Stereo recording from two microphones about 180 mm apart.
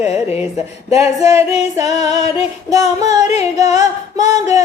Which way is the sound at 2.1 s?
35° left (ahead or behind).